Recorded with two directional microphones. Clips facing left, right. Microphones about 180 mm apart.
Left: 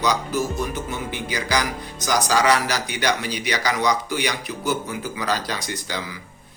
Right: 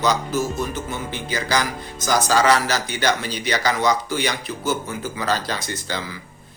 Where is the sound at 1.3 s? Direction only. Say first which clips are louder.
Right 2 dB; 15° left (ahead or behind).